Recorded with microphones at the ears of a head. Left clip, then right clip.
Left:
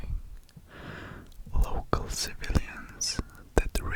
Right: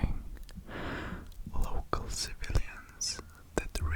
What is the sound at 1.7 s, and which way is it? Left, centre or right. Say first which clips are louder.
Whispering: left 5 dB; left.